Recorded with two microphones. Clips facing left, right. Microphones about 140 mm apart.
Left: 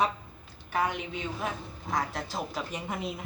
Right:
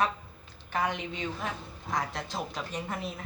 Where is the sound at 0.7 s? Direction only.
5° left (ahead or behind).